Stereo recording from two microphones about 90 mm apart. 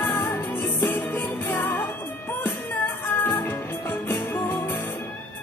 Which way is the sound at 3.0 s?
25° left (ahead or behind).